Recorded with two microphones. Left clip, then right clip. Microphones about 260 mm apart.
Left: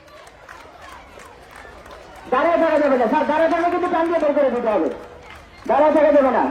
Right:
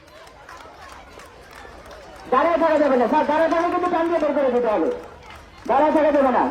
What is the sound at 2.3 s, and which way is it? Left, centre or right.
A man's voice, right.